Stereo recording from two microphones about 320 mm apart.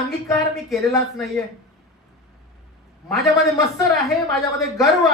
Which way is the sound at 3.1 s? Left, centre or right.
Centre.